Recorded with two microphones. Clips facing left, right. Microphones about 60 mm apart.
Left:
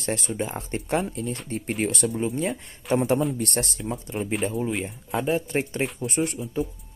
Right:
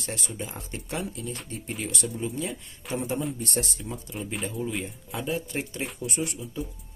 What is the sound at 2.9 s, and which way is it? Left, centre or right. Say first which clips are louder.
Speech: left 7 dB; left.